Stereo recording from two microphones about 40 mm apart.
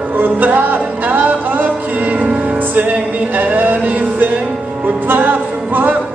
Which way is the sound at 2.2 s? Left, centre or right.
Right.